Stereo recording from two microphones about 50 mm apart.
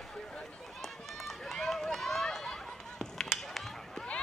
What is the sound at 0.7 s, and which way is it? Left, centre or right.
Run, centre.